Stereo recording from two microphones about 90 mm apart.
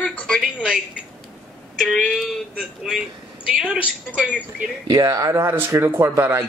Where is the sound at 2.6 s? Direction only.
5° right (ahead or behind).